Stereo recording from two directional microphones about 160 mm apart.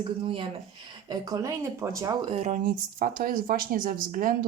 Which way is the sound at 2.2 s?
40° right (ahead or behind).